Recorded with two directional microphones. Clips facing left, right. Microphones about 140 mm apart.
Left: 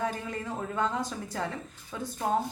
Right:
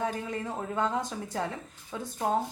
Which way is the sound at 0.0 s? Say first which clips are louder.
Right 1 dB; 25° right (ahead or behind).